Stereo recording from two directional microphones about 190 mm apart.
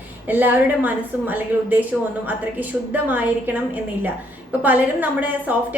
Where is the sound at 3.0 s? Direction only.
10° right (ahead or behind).